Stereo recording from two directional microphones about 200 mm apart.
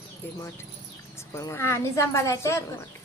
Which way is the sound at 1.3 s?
15° left (ahead or behind).